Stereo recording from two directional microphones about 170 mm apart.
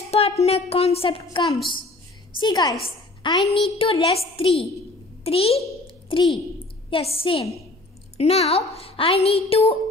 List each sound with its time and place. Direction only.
0.1 s a woman's voice: 35° left (ahead or behind)